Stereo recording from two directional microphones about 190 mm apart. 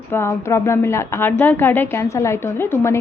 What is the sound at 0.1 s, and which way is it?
A woman's voice, 15° left (ahead or behind).